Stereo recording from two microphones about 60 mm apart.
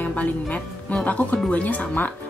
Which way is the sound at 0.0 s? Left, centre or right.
Left.